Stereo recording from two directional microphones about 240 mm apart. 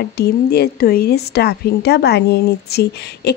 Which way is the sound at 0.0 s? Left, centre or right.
Left.